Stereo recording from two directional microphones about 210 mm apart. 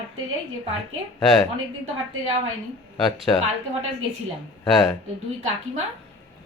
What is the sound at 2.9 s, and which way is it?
Speech, centre (ahead or behind).